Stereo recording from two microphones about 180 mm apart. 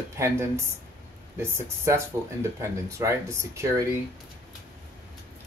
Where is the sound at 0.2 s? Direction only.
15° right (ahead or behind).